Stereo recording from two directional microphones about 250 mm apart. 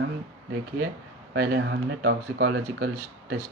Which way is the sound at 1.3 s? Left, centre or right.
Right.